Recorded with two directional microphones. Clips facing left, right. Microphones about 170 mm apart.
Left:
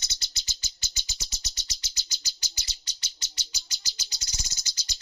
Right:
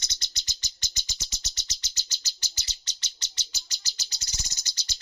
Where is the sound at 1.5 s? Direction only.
10° left (ahead or behind).